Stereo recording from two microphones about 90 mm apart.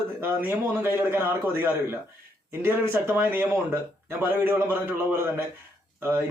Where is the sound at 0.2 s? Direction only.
25° right (ahead or behind).